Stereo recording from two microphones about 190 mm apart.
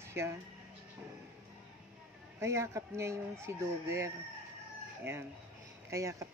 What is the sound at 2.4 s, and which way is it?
Speech, 15° right (ahead or behind).